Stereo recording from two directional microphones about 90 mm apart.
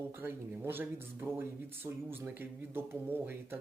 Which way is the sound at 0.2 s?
25° right (ahead or behind).